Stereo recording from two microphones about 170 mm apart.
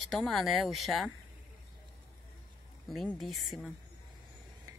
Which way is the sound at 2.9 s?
Centre (ahead or behind).